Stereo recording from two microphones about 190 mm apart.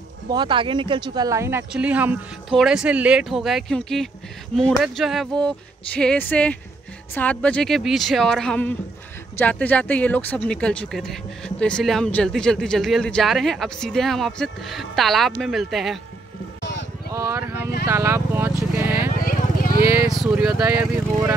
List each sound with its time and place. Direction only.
0.3 s speech: 25° right (ahead or behind); by 16.0 s centre (ahead or behind)
17.1 s speech: 15° right (ahead or behind)
18.8 s vehicle: 10° right (ahead or behind)
19.1 s vehicle: 50° left (ahead or behind)
20.1 s speech: 5° right (ahead or behind)